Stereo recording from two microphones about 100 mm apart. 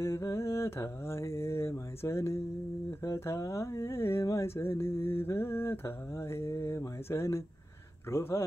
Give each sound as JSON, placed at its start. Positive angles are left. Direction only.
{"t": 0.0, "sound": "mantra", "side_deg": 25}